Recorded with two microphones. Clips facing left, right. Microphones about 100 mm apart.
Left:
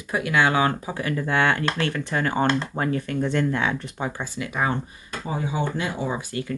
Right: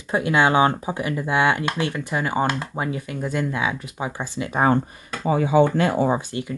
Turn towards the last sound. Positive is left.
turn(degrees=-25)  # may be behind; listen again after turning